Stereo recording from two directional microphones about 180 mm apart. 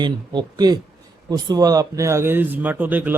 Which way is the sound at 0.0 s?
25° right (ahead or behind).